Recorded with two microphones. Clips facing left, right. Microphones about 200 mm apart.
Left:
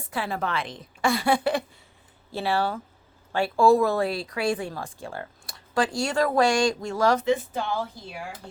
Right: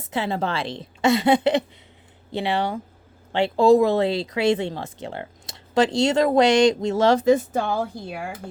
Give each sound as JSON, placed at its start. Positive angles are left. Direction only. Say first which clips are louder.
{"t": 0.0, "sound": "speech", "louder": "right 4 dB", "side_deg": -25}
{"t": 7.3, "sound": "speech", "louder": "right 6 dB", "side_deg": -45}